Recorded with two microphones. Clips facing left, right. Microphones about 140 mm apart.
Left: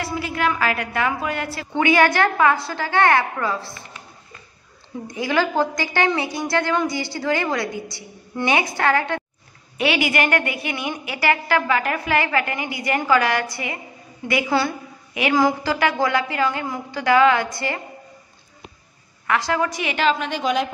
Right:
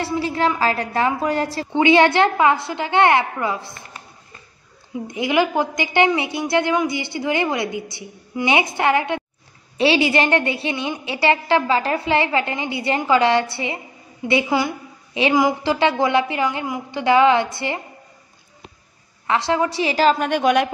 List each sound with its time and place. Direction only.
0.0 s a woman's voice: 30° right (ahead or behind)
5.0 s a woman's voice: 20° right (ahead or behind)
9.8 s a woman's voice: 30° right (ahead or behind)
14.5 s a woman's voice: 15° right (ahead or behind)
19.2 s a woman's voice: 25° right (ahead or behind); by 20.6 s 60° right (ahead or behind)